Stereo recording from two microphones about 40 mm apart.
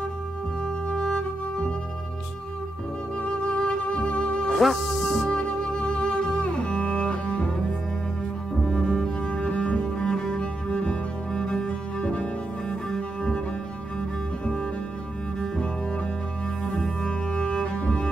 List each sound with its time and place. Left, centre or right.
0.8 s music: left
3.2 s music: left
4.6 s music: centre
5.3 s cello: left
8.5 s cello: centre
9.3 s cello: left
12.9 s cello: centre
17.3 s cello: left